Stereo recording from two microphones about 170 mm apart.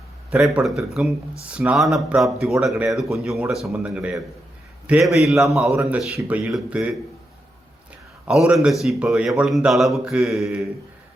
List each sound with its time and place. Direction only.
0.3 s speech: 5° right (ahead or behind)
8.3 s speech: centre (ahead or behind)